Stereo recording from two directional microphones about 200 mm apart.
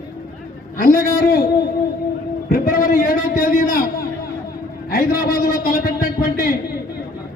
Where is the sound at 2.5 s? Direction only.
45° left (ahead or behind).